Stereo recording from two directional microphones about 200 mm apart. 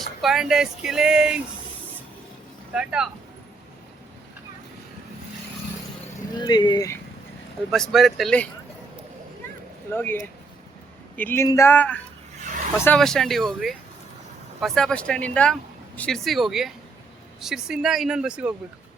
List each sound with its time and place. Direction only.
0.2 s speech: centre (ahead or behind)
2.7 s speech: 5° right (ahead or behind)
6.4 s speech: 20° left (ahead or behind)
7.7 s speech: centre (ahead or behind)
9.9 s speech: 10° left (ahead or behind); by 18.5 s 5° right (ahead or behind)